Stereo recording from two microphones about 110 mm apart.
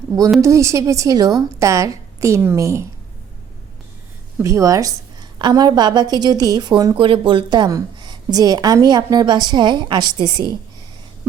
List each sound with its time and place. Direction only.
0.4 s a woman's voice: 30° right (ahead or behind)
4.4 s a woman's voice: 30° right (ahead or behind)
6.9 s a woman's voice: 50° right (ahead or behind)